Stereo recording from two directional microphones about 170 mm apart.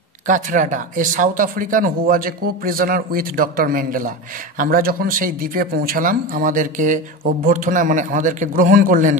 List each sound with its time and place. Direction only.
0.3 s a man's voice: 50° right (ahead or behind)